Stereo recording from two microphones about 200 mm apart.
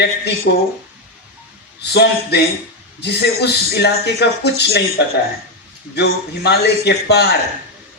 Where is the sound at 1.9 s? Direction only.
55° left (ahead or behind).